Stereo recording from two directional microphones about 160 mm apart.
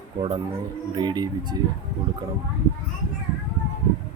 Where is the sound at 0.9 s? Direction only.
25° right (ahead or behind).